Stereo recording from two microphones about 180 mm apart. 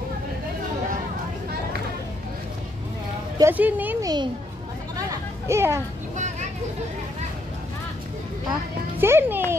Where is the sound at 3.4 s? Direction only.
10° right (ahead or behind).